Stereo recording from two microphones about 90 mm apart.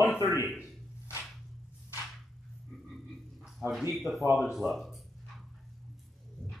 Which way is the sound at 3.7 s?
Centre (ahead or behind).